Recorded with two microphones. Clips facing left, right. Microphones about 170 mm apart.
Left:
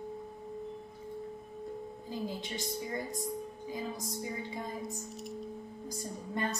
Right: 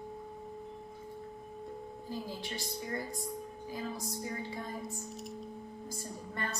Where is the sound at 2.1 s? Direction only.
20° left (ahead or behind).